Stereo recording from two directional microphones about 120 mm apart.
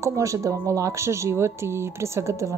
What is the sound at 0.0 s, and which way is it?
Speech, 25° right (ahead or behind).